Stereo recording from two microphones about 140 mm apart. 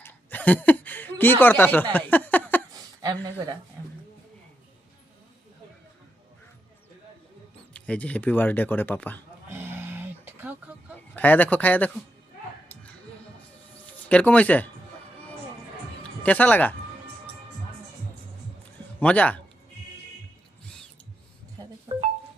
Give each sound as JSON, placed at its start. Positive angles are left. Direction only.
{"t": 0.0, "sound": "chuckle", "side_deg": 10}
{"t": 2.7, "sound": "a sound", "side_deg": -30}
{"t": 7.7, "sound": "speech", "side_deg": 10}
{"t": 9.5, "sound": "roaring cats", "side_deg": -15}
{"t": 11.1, "sound": "speech", "side_deg": 10}
{"t": 13.8, "sound": "speech", "side_deg": 10}
{"t": 16.2, "sound": "speech", "side_deg": 10}
{"t": 18.9, "sound": "speech", "side_deg": 10}
{"t": 21.6, "sound": "music", "side_deg": -35}